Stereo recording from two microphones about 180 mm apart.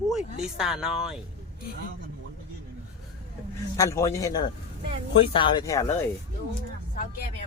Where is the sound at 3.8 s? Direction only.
15° left (ahead or behind).